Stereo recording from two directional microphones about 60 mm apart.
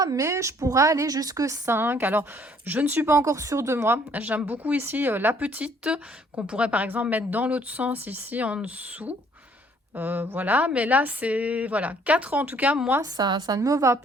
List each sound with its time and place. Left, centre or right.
0.0 s a woman's voice: right
1.6 s a woman's voice: right
3.1 s a woman's voice: right
4.1 s speech: right
5.4 s speech: right
13.0 s a woman's voice: right